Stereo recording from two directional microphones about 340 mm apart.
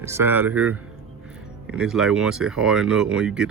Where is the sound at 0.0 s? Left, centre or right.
Centre.